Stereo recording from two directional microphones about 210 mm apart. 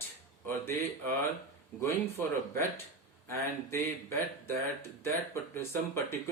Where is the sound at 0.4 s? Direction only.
10° left (ahead or behind).